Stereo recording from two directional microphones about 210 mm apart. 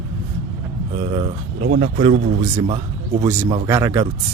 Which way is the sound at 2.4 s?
20° right (ahead or behind).